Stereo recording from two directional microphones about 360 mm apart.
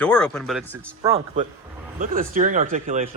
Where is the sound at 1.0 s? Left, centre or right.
Centre.